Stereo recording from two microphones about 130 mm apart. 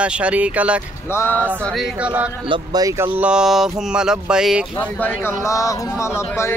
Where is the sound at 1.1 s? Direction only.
20° left (ahead or behind).